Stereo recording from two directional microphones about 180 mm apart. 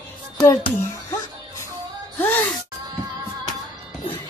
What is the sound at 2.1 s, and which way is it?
Gasp, 10° left (ahead or behind).